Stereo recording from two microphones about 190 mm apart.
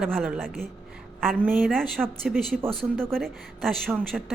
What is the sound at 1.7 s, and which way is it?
Speech, centre (ahead or behind).